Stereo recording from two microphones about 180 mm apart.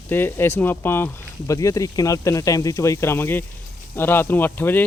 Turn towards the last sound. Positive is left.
turn(degrees=10)  # may be behind; listen again after turning